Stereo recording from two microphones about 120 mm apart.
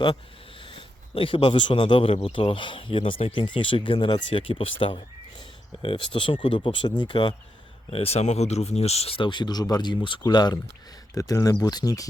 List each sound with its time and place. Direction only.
0.6 s speech: 45° left (ahead or behind)
7.9 s speech: 60° left (ahead or behind); by 12.0 s 35° left (ahead or behind)